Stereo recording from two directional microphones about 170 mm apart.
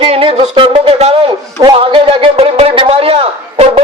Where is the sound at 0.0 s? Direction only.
35° right (ahead or behind).